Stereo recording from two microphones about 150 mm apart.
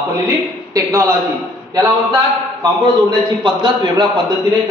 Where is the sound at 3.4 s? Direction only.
30° right (ahead or behind).